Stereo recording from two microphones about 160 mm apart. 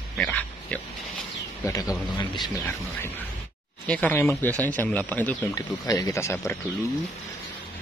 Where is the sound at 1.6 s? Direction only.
20° left (ahead or behind).